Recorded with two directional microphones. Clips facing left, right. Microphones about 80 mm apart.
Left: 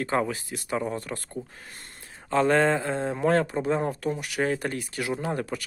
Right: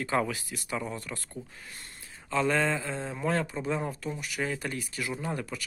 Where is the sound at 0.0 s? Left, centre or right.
Left.